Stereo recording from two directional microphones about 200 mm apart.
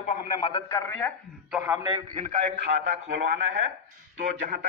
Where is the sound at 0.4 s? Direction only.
20° left (ahead or behind).